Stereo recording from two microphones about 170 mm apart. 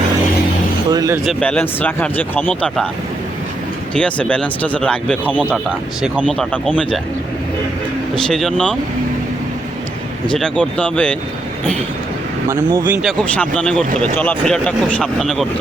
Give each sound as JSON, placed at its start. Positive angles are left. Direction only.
{"t": 0.9, "sound": "speech", "side_deg": -20}
{"t": 1.2, "sound": "speech", "side_deg": 5}
{"t": 3.9, "sound": "speech", "side_deg": 5}
{"t": 8.1, "sound": "speech", "side_deg": 0}
{"t": 10.3, "sound": "speech", "side_deg": 5}
{"t": 12.7, "sound": "speech", "side_deg": -10}
{"t": 13.1, "sound": "speech", "side_deg": 5}